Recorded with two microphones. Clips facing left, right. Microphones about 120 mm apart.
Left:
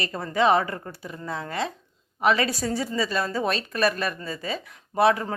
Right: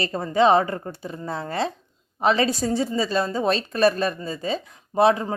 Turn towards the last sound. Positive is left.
turn(degrees=-25)  # may be behind; listen again after turning